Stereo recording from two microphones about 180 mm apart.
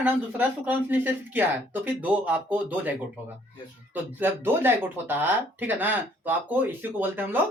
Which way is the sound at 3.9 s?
10° right (ahead or behind).